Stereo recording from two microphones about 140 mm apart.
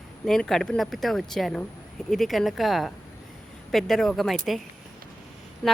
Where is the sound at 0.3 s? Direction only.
5° left (ahead or behind).